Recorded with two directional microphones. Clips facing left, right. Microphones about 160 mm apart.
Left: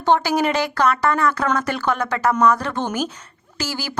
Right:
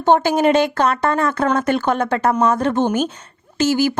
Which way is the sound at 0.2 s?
25° right (ahead or behind).